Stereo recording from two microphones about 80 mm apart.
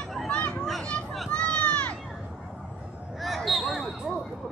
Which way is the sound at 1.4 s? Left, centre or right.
Centre.